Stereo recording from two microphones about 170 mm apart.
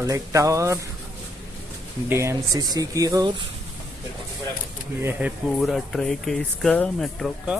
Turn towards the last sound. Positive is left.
turn(degrees=0)  # may be behind; listen again after turning